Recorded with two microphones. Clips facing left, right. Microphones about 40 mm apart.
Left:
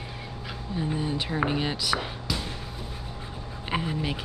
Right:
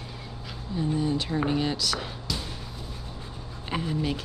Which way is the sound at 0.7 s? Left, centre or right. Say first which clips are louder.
Right 3 dB; centre.